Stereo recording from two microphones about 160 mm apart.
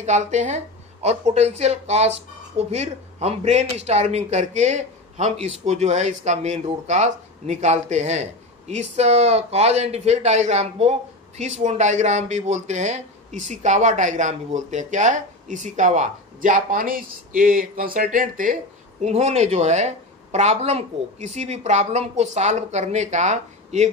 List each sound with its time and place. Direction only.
0.0 s speech: 45° right (ahead or behind)